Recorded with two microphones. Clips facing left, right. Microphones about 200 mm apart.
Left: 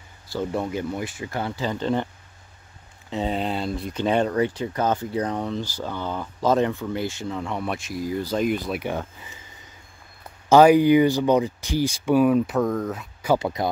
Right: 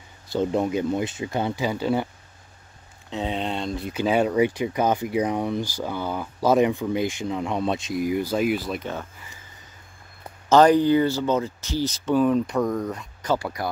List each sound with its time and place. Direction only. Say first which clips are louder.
0.3 s speech: right 4 dB; 20° right (ahead or behind)
3.1 s speech: left 2 dB; centre (ahead or behind)
8.7 s speech: left 3 dB; 15° left (ahead or behind)
10.5 s speech: left 2 dB; 10° left (ahead or behind)
13.4 s speech: left 4 dB; 20° left (ahead or behind)